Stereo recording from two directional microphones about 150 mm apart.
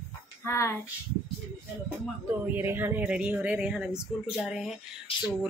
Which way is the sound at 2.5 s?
15° right (ahead or behind).